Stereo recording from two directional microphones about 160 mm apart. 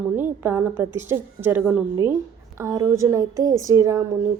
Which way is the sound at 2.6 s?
20° right (ahead or behind).